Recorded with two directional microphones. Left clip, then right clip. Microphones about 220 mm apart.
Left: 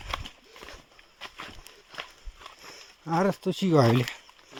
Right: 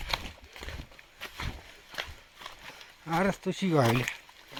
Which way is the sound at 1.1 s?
45° right (ahead or behind).